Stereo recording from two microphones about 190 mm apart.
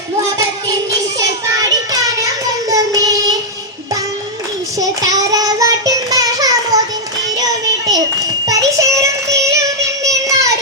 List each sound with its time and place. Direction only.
1.5 s child singing: 20° right (ahead or behind)
4.8 s child singing: 20° right (ahead or behind)
8.4 s music: 15° right (ahead or behind)
10.0 s child singing: 15° right (ahead or behind)